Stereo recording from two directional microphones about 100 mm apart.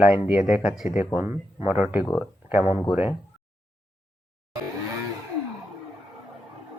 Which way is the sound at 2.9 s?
15° right (ahead or behind).